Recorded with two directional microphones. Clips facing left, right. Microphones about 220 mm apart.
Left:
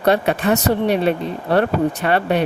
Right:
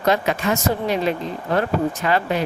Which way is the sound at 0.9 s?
65° left (ahead or behind).